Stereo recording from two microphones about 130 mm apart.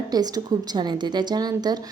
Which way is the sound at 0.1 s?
30° right (ahead or behind).